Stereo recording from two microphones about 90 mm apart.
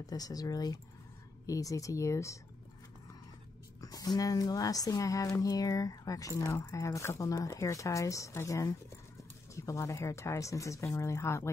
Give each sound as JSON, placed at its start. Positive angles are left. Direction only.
{"t": 0.0, "sound": "speech", "side_deg": 45}
{"t": 3.8, "sound": "speech", "side_deg": 45}